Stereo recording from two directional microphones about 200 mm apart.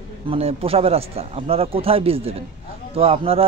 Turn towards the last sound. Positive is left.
turn(degrees=-30)  # may be behind; listen again after turning